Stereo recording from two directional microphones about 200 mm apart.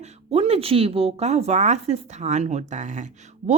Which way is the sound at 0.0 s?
30° right (ahead or behind).